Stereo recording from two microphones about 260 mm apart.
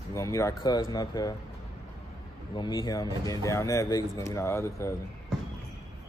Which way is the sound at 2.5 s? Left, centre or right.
Centre.